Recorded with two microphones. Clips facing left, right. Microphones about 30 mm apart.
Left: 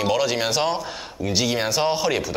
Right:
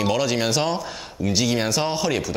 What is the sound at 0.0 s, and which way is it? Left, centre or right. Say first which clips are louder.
Speech: even; centre.